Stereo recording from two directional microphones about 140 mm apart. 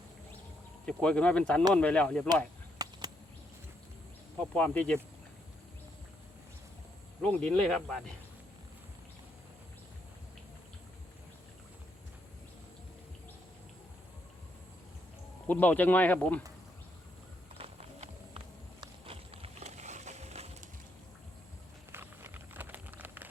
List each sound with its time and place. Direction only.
0.9 s speech: 5° left (ahead or behind)
2.7 s a sound: 25° right (ahead or behind)
4.4 s speech: 10° left (ahead or behind)
7.2 s speech: 5° left (ahead or behind)
15.4 s speech: 10° left (ahead or behind)
17.6 s clip-clop: 40° right (ahead or behind)
21.9 s a sound: 15° right (ahead or behind)